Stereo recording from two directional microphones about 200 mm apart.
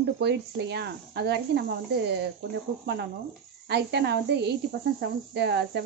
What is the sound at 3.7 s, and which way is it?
Speech, 55° right (ahead or behind).